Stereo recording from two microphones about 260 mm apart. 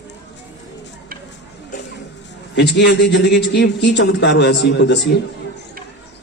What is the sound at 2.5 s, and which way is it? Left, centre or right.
A man's voice, left.